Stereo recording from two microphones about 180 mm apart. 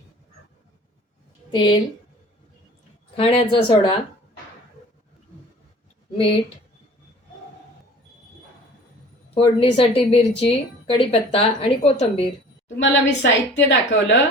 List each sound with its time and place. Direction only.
1.5 s a woman's voice: 25° left (ahead or behind)
3.2 s speech: 30° left (ahead or behind)
9.3 s speech: 30° left (ahead or behind)
12.6 s a woman's voice: 85° left